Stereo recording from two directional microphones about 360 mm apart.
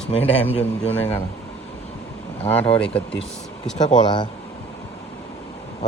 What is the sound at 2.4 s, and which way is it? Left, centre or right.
Speech, centre.